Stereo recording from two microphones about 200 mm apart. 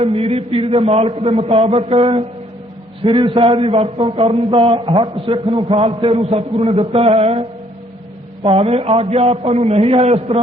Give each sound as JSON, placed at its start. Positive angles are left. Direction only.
{"t": 0.0, "sound": "a man's voice", "side_deg": -30}
{"t": 8.4, "sound": "a man's voice", "side_deg": -30}